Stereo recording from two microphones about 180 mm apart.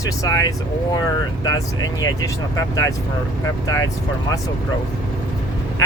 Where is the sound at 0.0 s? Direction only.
20° left (ahead or behind).